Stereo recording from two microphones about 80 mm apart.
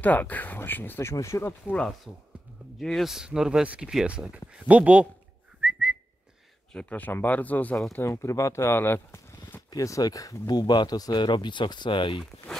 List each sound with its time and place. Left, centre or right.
0.0 s speech: centre; by 1.5 s left
2.1 s speech: centre
2.8 s speech: centre
5.6 s whistling: centre
6.7 s speech: centre
7.9 s speech: left
9.7 s speech: left